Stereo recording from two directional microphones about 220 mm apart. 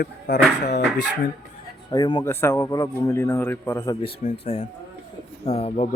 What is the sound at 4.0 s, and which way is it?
A man's voice, 25° left (ahead or behind).